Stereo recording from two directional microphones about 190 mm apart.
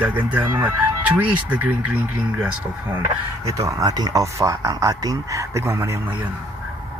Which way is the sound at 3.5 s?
15° right (ahead or behind).